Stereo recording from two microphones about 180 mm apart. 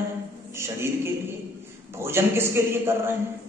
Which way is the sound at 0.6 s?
15° right (ahead or behind).